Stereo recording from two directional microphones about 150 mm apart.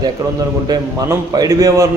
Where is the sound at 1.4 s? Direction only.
20° right (ahead or behind).